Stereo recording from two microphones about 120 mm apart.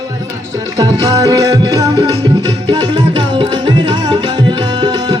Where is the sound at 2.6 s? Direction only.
35° right (ahead or behind).